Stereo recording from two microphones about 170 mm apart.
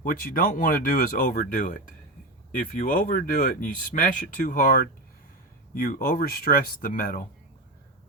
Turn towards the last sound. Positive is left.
turn(degrees=55)  # may be behind; listen again after turning